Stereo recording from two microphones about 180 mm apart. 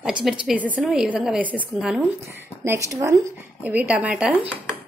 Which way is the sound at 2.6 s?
15° right (ahead or behind).